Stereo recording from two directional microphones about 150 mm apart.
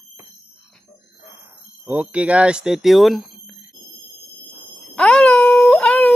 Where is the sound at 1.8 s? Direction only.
10° right (ahead or behind).